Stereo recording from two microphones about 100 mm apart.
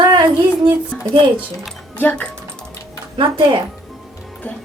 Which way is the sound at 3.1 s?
55° right (ahead or behind).